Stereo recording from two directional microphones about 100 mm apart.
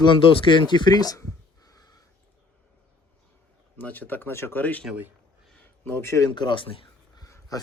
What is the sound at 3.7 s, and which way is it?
Speech, 15° left (ahead or behind).